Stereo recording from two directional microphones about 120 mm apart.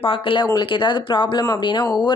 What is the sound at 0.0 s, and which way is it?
Speech, 45° left (ahead or behind).